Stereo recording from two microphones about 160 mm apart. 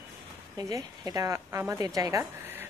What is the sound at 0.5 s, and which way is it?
A woman's voice, 25° right (ahead or behind).